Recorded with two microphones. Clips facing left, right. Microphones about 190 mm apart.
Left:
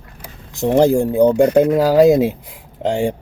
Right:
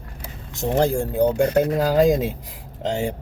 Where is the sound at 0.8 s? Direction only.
20° left (ahead or behind).